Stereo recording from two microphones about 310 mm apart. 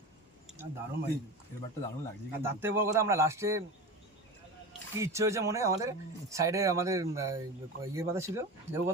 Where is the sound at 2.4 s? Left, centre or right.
Centre.